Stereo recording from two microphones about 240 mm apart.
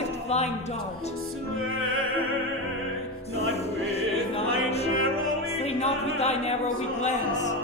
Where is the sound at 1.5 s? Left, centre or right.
Right.